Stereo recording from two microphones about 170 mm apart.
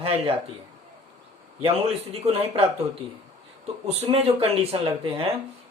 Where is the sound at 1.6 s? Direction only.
35° right (ahead or behind).